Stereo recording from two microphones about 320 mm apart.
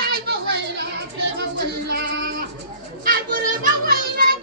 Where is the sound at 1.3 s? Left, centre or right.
Right.